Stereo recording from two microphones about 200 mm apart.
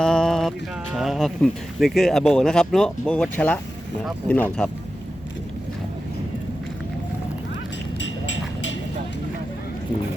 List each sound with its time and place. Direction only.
0.0 s music: 5° left (ahead or behind)
0.9 s speech: centre (ahead or behind)
7.9 s a sound: 65° left (ahead or behind)